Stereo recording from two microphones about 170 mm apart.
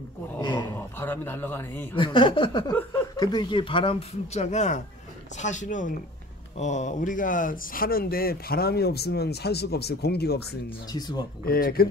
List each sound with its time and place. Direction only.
0.4 s speech: 25° left (ahead or behind)
0.7 s a man's voice: 10° left (ahead or behind)
2.0 s speech: 30° left (ahead or behind)
2.7 s a man's voice: 15° left (ahead or behind); by 10.6 s 70° left (ahead or behind)
10.9 s speech: 25° left (ahead or behind)
11.4 s a man's voice: 60° left (ahead or behind)